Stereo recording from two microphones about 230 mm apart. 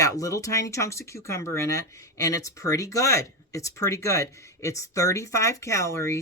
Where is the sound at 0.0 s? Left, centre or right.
Centre.